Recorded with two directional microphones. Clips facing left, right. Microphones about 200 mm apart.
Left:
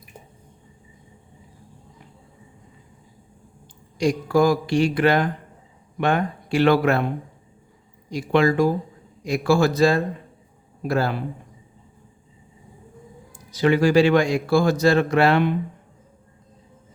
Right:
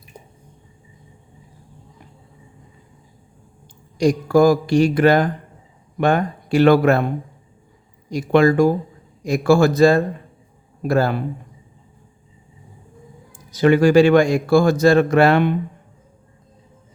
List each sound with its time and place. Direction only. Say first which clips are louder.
3.9 s a man's voice: right 4 dB; 45° right (ahead or behind)
8.1 s a man's voice: right 4 dB; 45° right (ahead or behind)
13.5 s a man's voice: right 4 dB; 50° right (ahead or behind)